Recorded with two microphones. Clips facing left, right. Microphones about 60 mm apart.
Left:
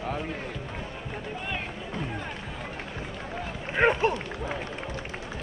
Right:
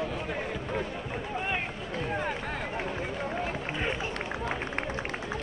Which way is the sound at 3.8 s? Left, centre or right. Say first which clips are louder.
Left 13 dB; left.